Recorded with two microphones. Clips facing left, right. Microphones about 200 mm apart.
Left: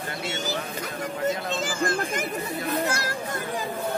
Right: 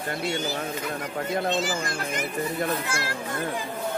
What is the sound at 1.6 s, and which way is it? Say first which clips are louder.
Speech: left 3 dB; 50° left (ahead or behind).